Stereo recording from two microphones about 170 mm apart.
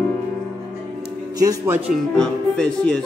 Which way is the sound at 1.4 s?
20° right (ahead or behind).